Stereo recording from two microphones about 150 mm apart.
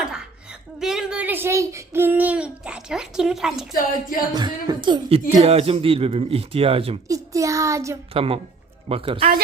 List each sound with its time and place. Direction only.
0.0 s a sound: 5° right (ahead or behind)
4.3 s speech: 25° right (ahead or behind)
5.3 s speech: 45° right (ahead or behind)
7.1 s child singing: 20° right (ahead or behind)
8.1 s speech: 40° right (ahead or behind)